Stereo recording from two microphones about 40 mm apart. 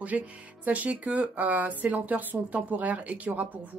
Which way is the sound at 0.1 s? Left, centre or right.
Right.